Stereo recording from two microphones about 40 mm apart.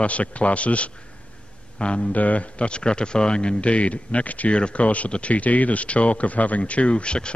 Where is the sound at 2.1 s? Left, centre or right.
Left.